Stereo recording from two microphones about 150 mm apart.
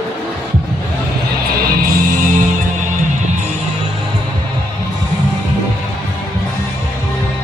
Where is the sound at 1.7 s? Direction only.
70° right (ahead or behind).